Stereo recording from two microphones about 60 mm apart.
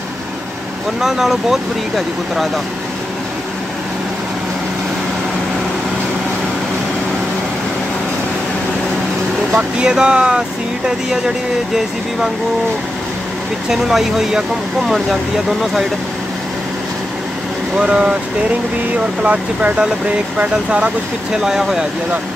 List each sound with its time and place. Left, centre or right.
1.0 s speech: centre
9.6 s speech: centre
13.7 s speech: centre
17.7 s speech: centre
19.2 s speech: right
21.3 s speech: centre